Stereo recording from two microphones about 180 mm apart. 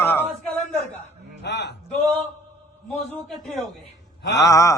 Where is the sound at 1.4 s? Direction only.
70° left (ahead or behind).